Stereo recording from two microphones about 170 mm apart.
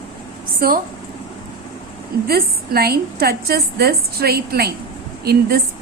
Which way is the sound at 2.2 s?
65° right (ahead or behind).